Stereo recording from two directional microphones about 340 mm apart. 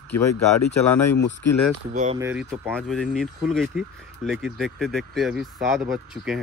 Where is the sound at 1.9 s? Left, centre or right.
Right.